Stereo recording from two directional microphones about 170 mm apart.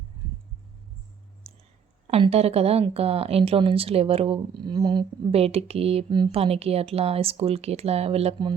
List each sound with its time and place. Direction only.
1.5 s clicking: 35° right (ahead or behind)
2.0 s a woman's voice: 35° right (ahead or behind)